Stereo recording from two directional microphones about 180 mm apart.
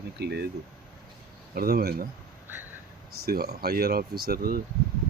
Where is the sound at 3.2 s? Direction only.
60° right (ahead or behind).